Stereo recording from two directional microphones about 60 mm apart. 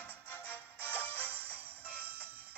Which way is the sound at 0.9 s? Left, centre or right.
Left.